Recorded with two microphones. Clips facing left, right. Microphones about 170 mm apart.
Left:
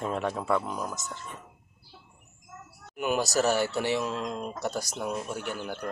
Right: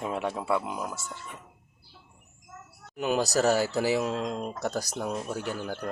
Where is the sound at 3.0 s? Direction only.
35° right (ahead or behind).